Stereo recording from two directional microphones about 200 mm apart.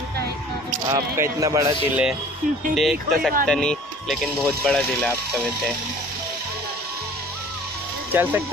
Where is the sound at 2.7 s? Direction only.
Centre (ahead or behind).